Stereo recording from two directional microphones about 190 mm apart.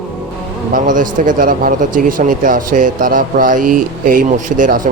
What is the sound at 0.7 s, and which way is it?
Speech, 45° right (ahead or behind).